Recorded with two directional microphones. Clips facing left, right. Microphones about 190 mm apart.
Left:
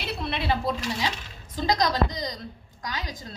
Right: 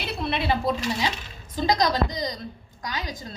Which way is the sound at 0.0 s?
15° right (ahead or behind).